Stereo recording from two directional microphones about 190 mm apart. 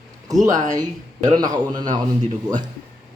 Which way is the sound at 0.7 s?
20° right (ahead or behind).